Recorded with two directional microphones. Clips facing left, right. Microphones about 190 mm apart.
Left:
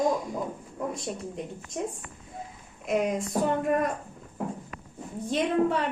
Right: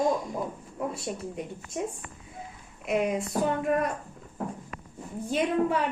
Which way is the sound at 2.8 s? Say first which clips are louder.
Even; centre (ahead or behind).